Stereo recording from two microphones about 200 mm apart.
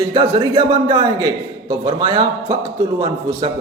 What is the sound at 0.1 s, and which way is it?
Speech, 25° right (ahead or behind).